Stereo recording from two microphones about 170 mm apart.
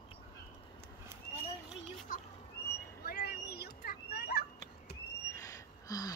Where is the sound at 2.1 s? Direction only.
50° left (ahead or behind).